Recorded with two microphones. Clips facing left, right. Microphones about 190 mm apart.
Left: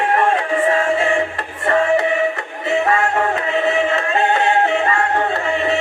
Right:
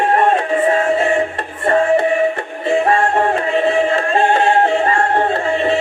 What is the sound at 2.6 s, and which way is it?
Music, 30° right (ahead or behind).